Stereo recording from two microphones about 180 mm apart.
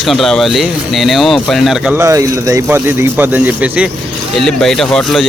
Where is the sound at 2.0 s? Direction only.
15° right (ahead or behind).